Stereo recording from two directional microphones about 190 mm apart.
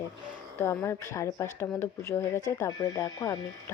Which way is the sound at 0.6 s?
15° left (ahead or behind).